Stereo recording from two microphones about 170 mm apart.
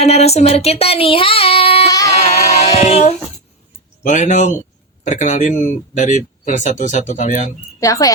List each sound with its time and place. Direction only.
0.0 s child singing: 40° left (ahead or behind)
2.0 s female singing: 40° left (ahead or behind)
4.0 s speech: 45° left (ahead or behind)
7.8 s frog: 20° left (ahead or behind)